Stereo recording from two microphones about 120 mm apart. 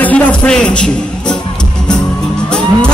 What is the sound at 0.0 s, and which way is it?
Speech, 10° left (ahead or behind).